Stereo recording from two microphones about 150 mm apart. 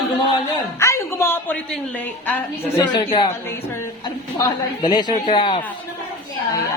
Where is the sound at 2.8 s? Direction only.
30° left (ahead or behind).